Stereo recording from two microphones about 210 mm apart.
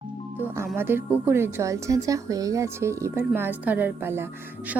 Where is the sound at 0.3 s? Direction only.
10° right (ahead or behind).